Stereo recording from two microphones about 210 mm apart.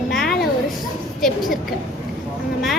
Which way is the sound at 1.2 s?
Centre (ahead or behind).